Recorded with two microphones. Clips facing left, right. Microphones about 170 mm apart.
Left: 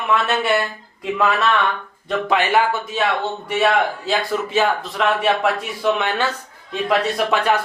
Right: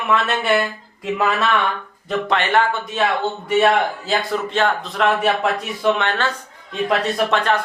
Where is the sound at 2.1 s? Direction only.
5° left (ahead or behind).